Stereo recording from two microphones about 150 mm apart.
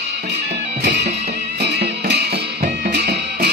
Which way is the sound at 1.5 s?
90° right.